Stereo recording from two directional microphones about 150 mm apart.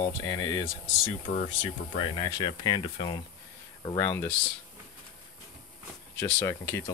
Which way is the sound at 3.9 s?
15° left (ahead or behind).